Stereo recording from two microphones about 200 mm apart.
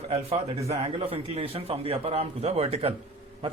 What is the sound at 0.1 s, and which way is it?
A man's voice, 30° right (ahead or behind).